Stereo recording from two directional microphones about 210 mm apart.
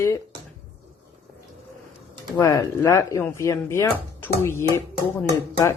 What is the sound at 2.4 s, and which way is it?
Speech, 15° left (ahead or behind).